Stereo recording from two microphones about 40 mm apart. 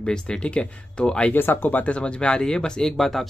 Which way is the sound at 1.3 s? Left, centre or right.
Left.